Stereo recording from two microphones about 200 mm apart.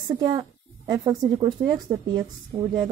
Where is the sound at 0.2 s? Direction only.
20° right (ahead or behind).